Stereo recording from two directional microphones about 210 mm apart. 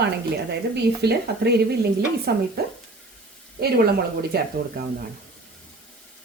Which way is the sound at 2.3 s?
50° right (ahead or behind).